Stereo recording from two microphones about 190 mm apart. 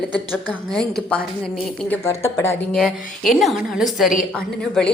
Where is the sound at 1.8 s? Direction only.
15° left (ahead or behind).